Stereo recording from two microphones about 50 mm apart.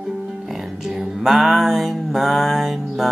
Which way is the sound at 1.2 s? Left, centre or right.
Centre.